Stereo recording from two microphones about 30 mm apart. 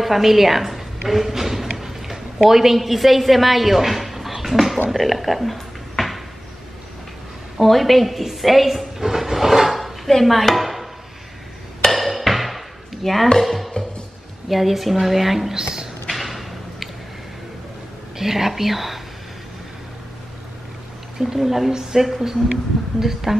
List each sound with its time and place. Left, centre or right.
0.0 s a woman's voice: centre
4.9 s a sound: centre
7.6 s a woman's voice: centre
9.0 s train: centre
9.8 s a sound: centre
10.2 s a woman's voice: centre
11.9 s dishes: centre
13.4 s chopping: centre
14.5 s a woman's voice: centre
15.5 s a woman's voice: right
16.1 s a sound: centre
18.1 s speech: centre
21.2 s speech: centre